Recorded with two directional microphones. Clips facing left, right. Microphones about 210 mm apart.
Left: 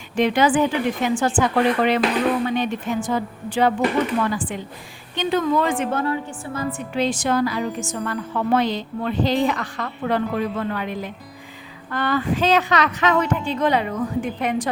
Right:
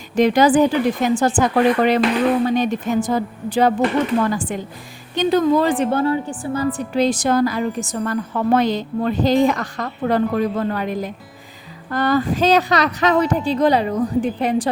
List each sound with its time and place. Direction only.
0.2 s a woman's voice: 40° right (ahead or behind)